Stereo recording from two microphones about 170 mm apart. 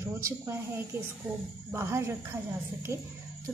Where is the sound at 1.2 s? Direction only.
Centre (ahead or behind).